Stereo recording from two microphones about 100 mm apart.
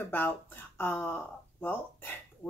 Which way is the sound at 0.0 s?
20° left (ahead or behind).